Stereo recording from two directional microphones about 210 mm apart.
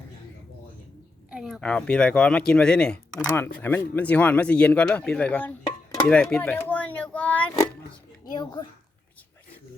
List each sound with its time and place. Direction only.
1.3 s speech: 5° right (ahead or behind)
8.2 s a child's voice: 20° left (ahead or behind)